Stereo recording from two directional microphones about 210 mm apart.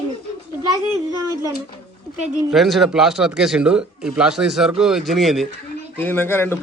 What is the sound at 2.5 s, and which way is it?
A man's voice, centre (ahead or behind).